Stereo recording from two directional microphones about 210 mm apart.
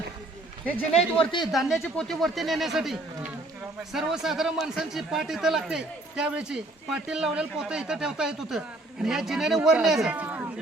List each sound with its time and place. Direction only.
0.9 s speech: 25° left (ahead or behind)
1.4 s a man's voice: centre (ahead or behind)